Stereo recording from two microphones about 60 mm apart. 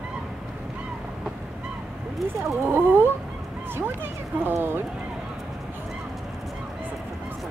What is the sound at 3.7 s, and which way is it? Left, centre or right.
Speech, right.